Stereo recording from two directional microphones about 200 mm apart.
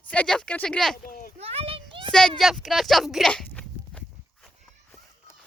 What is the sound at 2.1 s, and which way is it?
Speech, 5° left (ahead or behind).